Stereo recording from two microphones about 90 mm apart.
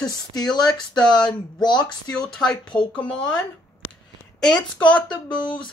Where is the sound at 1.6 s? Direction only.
55° left (ahead or behind).